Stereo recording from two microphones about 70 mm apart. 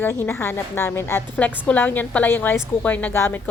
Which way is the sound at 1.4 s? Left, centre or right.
Left.